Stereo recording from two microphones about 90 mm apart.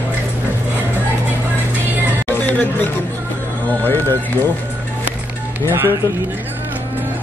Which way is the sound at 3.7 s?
20° left (ahead or behind).